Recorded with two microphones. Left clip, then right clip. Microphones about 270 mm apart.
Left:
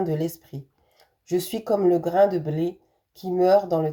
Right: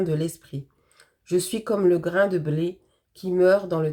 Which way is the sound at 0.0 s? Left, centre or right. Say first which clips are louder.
Even; centre.